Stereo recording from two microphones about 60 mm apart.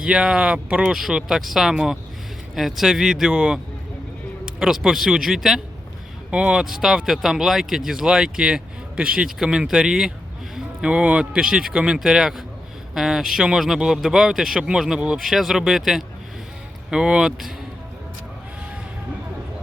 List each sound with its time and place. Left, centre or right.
0.0 s speech: centre
0.9 s speech: centre
15.2 s speech: centre